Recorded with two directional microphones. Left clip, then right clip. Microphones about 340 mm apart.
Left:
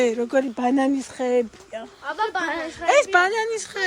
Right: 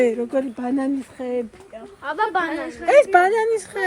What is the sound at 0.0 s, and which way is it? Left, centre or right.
Speech, centre.